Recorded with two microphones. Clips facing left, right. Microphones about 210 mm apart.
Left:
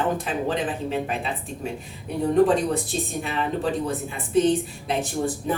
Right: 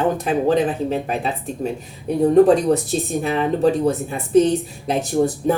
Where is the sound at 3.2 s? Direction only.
40° right (ahead or behind).